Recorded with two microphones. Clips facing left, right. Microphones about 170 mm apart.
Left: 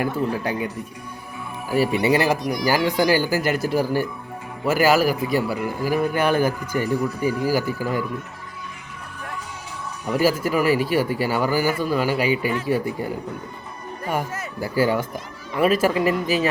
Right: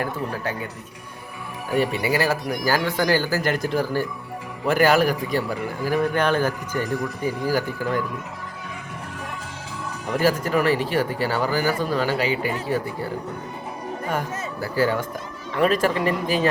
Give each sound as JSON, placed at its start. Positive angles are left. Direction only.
{"t": 0.0, "sound": "speech", "side_deg": 15}
{"t": 1.9, "sound": "speech", "side_deg": 25}
{"t": 10.1, "sound": "speech", "side_deg": 10}
{"t": 12.4, "sound": "speech", "side_deg": -40}
{"t": 12.6, "sound": "speech", "side_deg": 15}
{"t": 14.1, "sound": "speech", "side_deg": 10}